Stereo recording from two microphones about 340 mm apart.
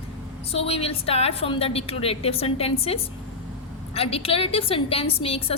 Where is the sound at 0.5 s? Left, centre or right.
Centre.